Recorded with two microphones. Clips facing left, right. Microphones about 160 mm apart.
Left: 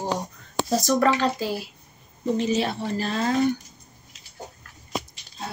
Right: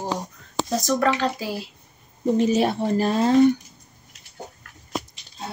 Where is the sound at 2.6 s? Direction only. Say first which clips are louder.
Right 5 dB; 45° right (ahead or behind).